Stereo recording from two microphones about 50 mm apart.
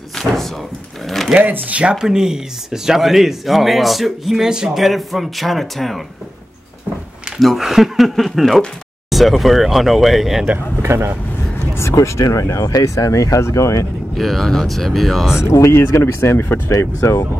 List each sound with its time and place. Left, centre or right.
0.1 s drawer open or close: centre
1.4 s speech: right
2.0 s speech: centre
4.7 s speech: centre
7.3 s speech: centre
10.8 s speech: right
11.7 s speech: left
14.1 s speech: centre
15.4 s speech: left
17.0 s speech: left